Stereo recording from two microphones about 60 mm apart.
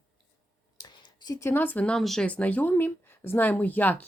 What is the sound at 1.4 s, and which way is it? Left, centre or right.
Speech, left.